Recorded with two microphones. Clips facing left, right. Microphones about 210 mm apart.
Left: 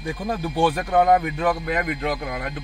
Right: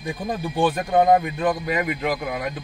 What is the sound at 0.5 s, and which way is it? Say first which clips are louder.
Speech: even; 15° right (ahead or behind).